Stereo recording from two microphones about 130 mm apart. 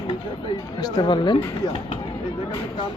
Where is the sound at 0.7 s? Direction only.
30° left (ahead or behind).